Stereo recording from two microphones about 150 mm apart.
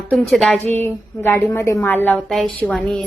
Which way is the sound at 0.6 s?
50° right (ahead or behind).